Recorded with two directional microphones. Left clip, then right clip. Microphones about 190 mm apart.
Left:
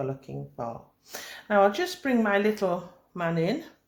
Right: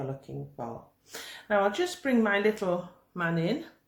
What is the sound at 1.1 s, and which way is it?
Speech, 30° left (ahead or behind).